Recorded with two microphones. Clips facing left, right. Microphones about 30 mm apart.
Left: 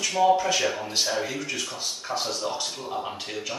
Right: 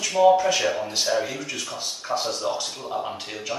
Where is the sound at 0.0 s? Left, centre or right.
Centre.